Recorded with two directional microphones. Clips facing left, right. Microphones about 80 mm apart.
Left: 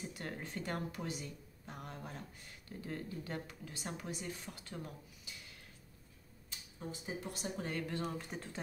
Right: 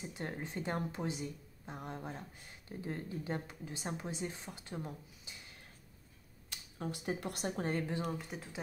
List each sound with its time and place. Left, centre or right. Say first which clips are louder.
0.1 s speech: right 3 dB; right
6.5 s speech: right 4 dB; right
8.0 s speech: right 1 dB; centre